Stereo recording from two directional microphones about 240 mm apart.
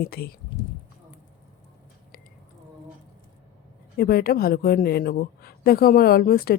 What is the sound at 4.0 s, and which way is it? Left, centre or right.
Speech, left.